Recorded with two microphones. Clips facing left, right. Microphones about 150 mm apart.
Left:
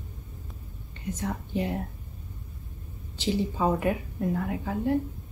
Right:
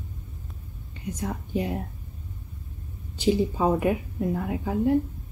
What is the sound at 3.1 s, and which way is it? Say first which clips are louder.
Speech: right 4 dB; 15° right (ahead or behind).